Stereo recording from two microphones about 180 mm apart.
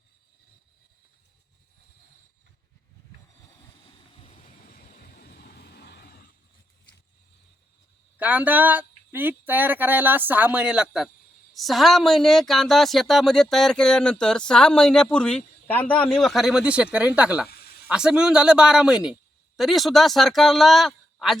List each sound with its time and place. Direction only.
4.1 s train: 35° left (ahead or behind)
4.7 s vehicle: 55° left (ahead or behind)
8.2 s a woman's voice: 10° right (ahead or behind)
17.5 s snake: 60° left (ahead or behind)
17.8 s a woman's voice: 5° right (ahead or behind)